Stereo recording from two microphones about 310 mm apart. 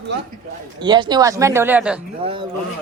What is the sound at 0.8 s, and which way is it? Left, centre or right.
Speech, centre.